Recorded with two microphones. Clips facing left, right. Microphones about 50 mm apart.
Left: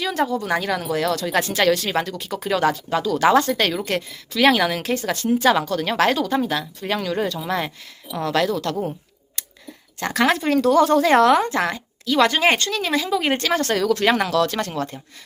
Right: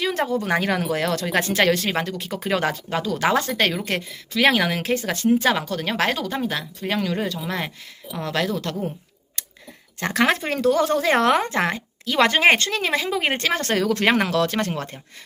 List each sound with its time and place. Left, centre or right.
0.0 s speech: right
3.2 s a woman's voice: centre
10.0 s a woman's voice: centre
11.2 s speech: right